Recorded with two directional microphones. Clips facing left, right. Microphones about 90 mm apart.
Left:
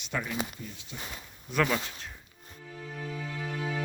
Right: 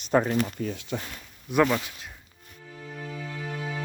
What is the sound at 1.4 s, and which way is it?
Speech, 15° right (ahead or behind).